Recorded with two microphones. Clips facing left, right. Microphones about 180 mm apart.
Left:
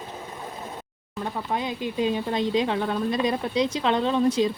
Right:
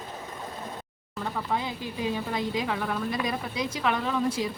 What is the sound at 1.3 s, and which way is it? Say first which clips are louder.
Speech: left 2 dB; 20° left (ahead or behind).